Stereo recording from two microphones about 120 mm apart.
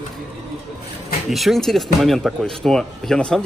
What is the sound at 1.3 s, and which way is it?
Speech, centre (ahead or behind).